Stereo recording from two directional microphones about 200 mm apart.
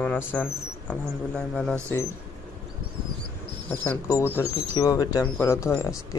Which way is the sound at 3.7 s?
10° left (ahead or behind).